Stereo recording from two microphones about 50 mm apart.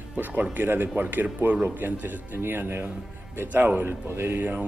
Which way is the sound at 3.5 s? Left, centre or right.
Right.